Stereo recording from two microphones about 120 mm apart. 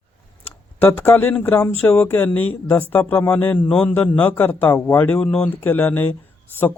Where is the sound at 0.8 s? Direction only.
15° left (ahead or behind).